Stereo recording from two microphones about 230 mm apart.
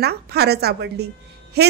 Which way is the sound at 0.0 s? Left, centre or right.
Right.